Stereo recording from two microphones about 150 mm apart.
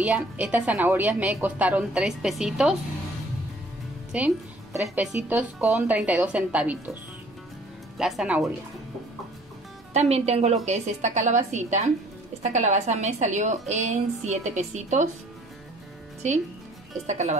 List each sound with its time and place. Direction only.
0.0 s a woman's voice: 10° right (ahead or behind)
4.9 s a woman's voice: 10° right (ahead or behind)
8.0 s speech: 5° right (ahead or behind)
9.9 s a woman's voice: 45° right (ahead or behind)
17.0 s a woman's voice: 50° right (ahead or behind)